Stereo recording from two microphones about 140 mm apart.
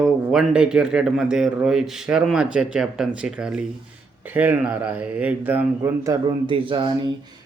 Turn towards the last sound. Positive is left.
turn(degrees=-35)  # may be behind; listen again after turning